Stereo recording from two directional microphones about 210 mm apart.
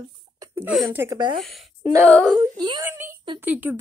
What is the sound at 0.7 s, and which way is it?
Speech, centre (ahead or behind).